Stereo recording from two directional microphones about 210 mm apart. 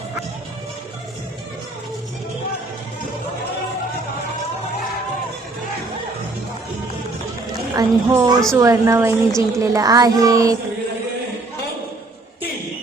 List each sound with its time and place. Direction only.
7.8 s a child's voice: 15° right (ahead or behind)